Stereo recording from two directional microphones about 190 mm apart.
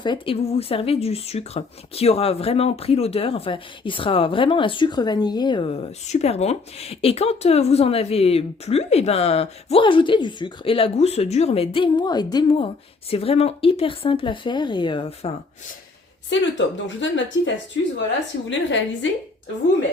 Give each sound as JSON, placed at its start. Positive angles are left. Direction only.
{"t": 0.0, "sound": "speech", "side_deg": 25}
{"t": 16.3, "sound": "a woman's voice", "side_deg": 75}